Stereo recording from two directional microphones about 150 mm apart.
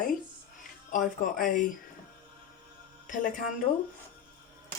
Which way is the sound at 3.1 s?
60° left (ahead or behind).